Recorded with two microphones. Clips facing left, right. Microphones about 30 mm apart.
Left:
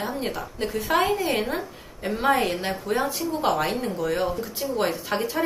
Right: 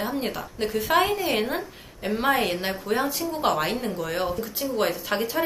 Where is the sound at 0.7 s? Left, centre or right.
Centre.